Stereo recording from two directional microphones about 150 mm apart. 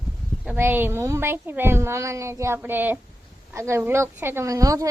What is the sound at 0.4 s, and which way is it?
A woman's voice, 15° right (ahead or behind).